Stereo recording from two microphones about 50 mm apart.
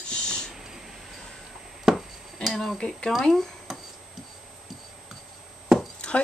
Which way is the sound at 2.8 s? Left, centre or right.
Centre.